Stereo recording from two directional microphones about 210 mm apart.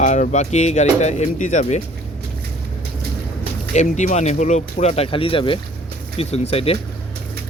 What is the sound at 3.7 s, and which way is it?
Speech, 35° left (ahead or behind).